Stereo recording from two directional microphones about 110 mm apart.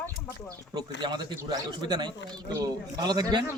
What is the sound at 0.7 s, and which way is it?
A man's voice, 40° right (ahead or behind).